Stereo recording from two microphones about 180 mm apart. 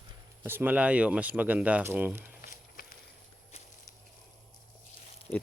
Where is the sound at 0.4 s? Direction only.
10° right (ahead or behind).